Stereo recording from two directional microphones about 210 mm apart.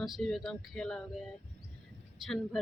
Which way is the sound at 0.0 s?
Centre (ahead or behind).